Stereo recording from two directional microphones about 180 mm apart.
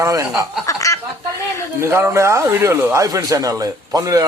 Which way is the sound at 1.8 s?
15° right (ahead or behind).